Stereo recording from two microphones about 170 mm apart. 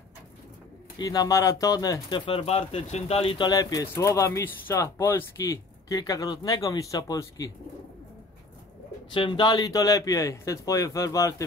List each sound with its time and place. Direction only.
0.9 s speech: 20° left (ahead or behind)
9.1 s speech: 30° left (ahead or behind)